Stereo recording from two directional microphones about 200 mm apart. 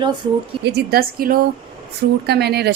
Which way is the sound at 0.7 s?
55° right (ahead or behind).